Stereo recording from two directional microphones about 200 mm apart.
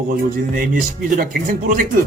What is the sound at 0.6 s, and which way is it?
Speech, 45° right (ahead or behind).